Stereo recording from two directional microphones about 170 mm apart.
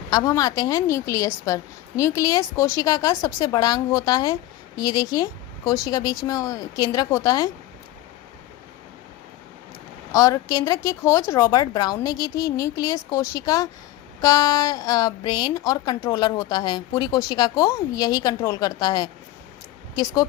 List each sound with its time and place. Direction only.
0.1 s speech: 20° left (ahead or behind)
10.1 s speech: 20° left (ahead or behind)